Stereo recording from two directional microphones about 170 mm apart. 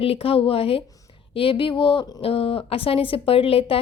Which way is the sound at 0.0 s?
35° left (ahead or behind).